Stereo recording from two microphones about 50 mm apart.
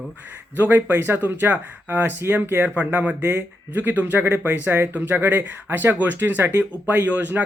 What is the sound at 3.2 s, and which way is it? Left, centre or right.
Speech, right.